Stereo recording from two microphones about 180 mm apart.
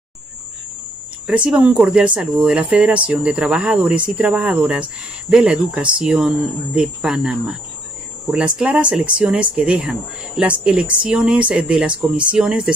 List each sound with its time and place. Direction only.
1.2 s speech: 5° right (ahead or behind)